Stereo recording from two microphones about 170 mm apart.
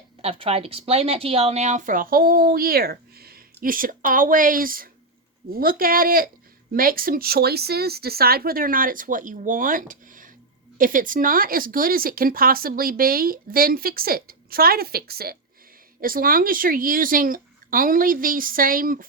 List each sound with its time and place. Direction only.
0.2 s a woman's voice: 35° right (ahead or behind); by 19.0 s 55° right (ahead or behind)